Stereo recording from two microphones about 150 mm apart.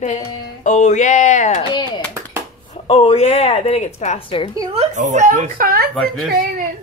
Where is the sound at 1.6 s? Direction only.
30° left (ahead or behind).